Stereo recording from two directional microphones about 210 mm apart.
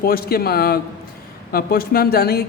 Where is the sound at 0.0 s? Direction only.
45° left (ahead or behind).